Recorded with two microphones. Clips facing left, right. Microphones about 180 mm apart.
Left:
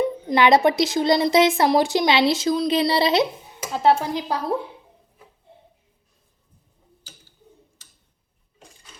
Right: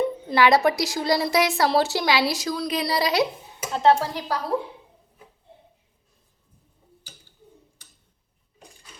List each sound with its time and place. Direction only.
0.0 s speech: 20° left (ahead or behind)
3.7 s speech: 15° left (ahead or behind)